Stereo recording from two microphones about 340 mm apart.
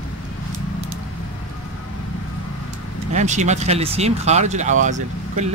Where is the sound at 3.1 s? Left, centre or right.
Right.